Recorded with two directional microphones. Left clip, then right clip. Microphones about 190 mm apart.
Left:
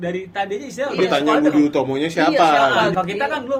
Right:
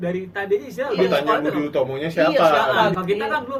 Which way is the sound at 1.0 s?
45° left (ahead or behind).